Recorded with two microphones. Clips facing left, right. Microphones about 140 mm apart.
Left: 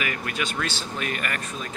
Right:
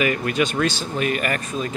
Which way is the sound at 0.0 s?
25° right (ahead or behind).